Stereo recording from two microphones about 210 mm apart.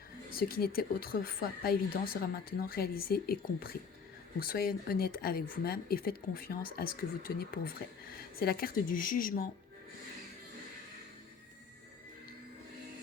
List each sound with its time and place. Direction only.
0.3 s speech: 45° left (ahead or behind)